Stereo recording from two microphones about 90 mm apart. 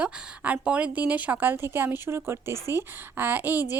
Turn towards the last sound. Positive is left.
turn(degrees=-20)  # may be behind; listen again after turning